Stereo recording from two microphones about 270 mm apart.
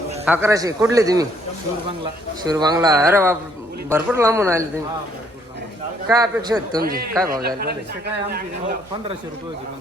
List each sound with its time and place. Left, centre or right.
0.3 s a man's voice: centre
2.4 s a man's voice: centre
6.1 s a man's voice: centre
7.4 s speech: right